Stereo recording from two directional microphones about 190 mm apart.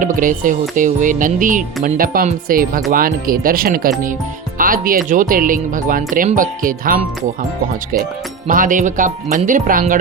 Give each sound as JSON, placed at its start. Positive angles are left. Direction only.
{"t": 0.0, "sound": "speech", "side_deg": -45}
{"t": 8.4, "sound": "speech", "side_deg": -45}